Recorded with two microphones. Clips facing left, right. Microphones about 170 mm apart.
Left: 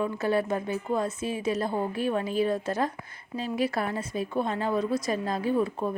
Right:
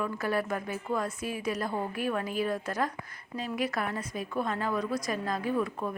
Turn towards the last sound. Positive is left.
turn(degrees=30)  # may be behind; listen again after turning